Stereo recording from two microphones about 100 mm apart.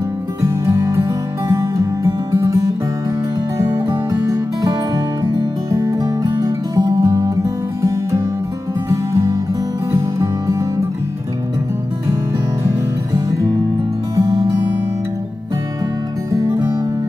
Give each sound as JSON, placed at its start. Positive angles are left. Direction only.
{"t": 0.4, "sound": "music", "side_deg": -30}
{"t": 12.6, "sound": "music", "side_deg": -35}
{"t": 16.3, "sound": "music", "side_deg": -30}